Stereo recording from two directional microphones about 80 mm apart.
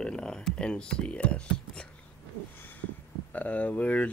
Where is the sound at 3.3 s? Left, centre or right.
Centre.